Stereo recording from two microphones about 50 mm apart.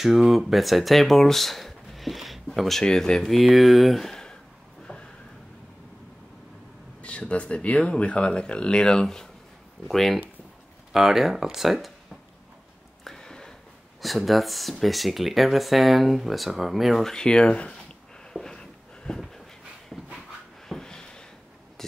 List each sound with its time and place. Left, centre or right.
0.0 s speech: centre
2.8 s speech: centre
3.3 s speech: centre
7.0 s speech: left; by 11.9 s centre
13.0 s a sound: centre
14.0 s speech: centre
17.0 s speech: centre
18.3 s a sound: centre
19.9 s dog: centre
20.6 s a sound: centre